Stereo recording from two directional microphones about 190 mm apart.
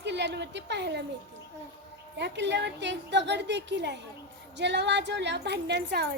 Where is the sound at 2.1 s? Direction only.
65° right (ahead or behind).